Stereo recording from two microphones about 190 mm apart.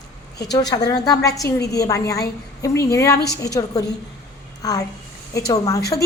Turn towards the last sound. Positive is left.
turn(degrees=20)  # may be behind; listen again after turning